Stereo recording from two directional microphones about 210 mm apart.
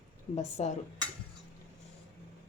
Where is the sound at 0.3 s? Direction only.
30° left (ahead or behind).